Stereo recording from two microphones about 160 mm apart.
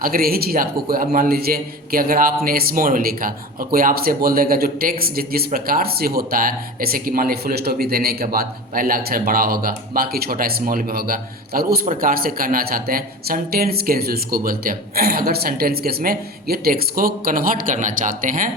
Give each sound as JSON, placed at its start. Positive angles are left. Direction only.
{"t": 0.0, "sound": "a man's voice", "side_deg": -65}